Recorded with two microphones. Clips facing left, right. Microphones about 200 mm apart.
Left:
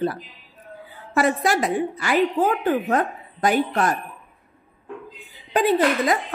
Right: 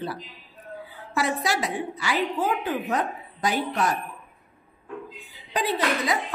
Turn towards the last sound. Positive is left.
turn(degrees=50)  # may be behind; listen again after turning